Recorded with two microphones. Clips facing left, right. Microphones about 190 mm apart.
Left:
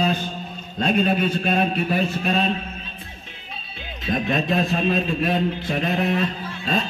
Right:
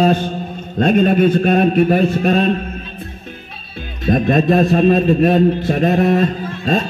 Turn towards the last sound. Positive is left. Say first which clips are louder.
# right 7 dB
turn(degrees=-45)  # may be behind; listen again after turning